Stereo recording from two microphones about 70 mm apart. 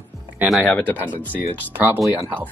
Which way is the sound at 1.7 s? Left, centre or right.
Right.